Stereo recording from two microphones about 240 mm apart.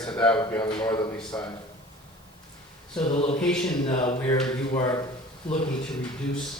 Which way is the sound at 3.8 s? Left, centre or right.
Centre.